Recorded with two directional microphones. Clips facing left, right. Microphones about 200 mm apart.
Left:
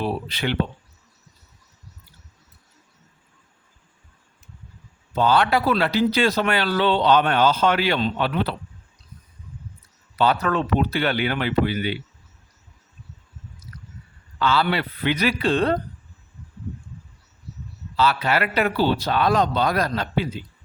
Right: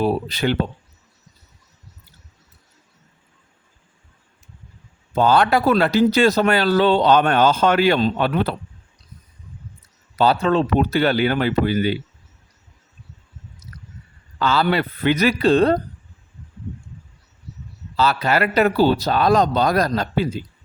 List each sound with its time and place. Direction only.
0.0 s speech: 40° right (ahead or behind)
5.1 s a man's voice: 45° right (ahead or behind)
10.2 s speech: 30° right (ahead or behind)
10.8 s speech: 45° right (ahead or behind)
14.3 s a man's voice: 40° right (ahead or behind)
17.9 s speech: 40° right (ahead or behind)